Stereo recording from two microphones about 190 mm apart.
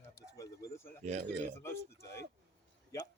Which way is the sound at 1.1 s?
35° right (ahead or behind).